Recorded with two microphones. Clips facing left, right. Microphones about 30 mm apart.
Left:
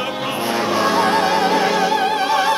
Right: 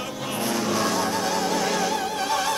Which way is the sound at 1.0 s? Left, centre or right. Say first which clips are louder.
Left 9 dB; left.